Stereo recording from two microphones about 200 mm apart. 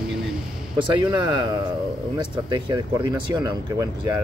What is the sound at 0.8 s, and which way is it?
Speech, 25° right (ahead or behind).